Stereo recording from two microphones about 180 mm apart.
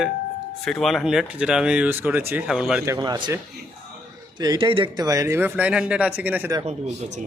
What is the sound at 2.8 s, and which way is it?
A man's voice, 20° right (ahead or behind).